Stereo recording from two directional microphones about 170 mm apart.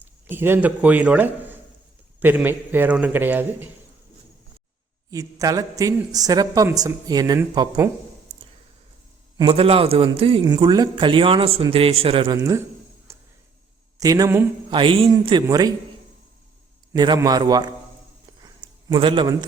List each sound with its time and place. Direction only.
0.0 s a man's voice: 10° right (ahead or behind)
5.1 s a woman's voice: 20° right (ahead or behind)
9.4 s a man's voice: 30° right (ahead or behind)
12.4 s a man's voice: 15° right (ahead or behind)
13.1 s a sound: 15° right (ahead or behind)
14.0 s a woman's voice: 20° right (ahead or behind)
14.7 s a woman's voice: 30° right (ahead or behind)
16.9 s a woman's voice: 25° right (ahead or behind)
18.4 s a sound: 25° right (ahead or behind)